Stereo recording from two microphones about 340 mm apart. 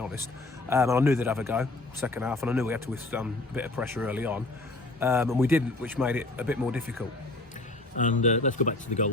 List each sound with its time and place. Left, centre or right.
0.7 s a man's voice: centre
7.9 s speech: left